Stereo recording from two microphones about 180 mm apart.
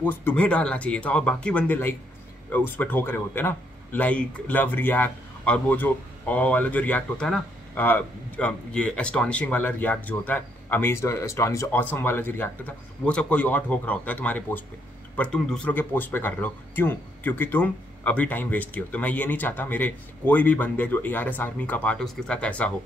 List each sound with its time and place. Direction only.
0.0 s speech: 10° left (ahead or behind)